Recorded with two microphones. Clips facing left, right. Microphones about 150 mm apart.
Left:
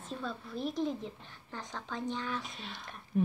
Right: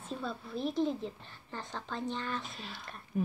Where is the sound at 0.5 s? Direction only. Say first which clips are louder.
Right 3 dB; 35° right (ahead or behind).